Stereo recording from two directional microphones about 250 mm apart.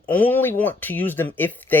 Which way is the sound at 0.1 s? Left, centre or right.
Centre.